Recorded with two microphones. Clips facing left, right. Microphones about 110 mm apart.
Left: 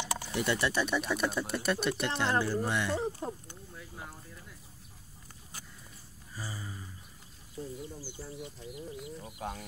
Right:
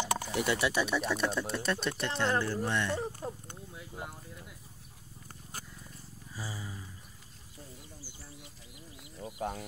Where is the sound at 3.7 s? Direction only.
15° right (ahead or behind).